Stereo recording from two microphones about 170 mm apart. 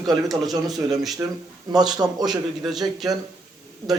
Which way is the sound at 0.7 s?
25° right (ahead or behind).